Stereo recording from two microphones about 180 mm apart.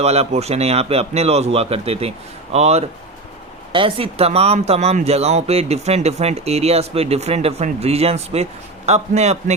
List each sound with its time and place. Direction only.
0.0 s speech: 35° right (ahead or behind)